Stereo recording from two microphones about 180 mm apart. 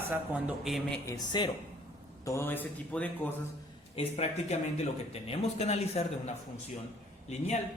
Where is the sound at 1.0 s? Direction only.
20° left (ahead or behind).